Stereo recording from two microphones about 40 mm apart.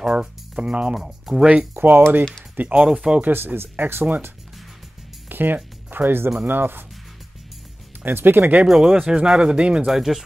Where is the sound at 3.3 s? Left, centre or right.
Right.